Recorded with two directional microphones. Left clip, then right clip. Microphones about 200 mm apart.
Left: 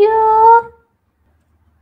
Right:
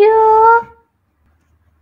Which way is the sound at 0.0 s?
10° right (ahead or behind).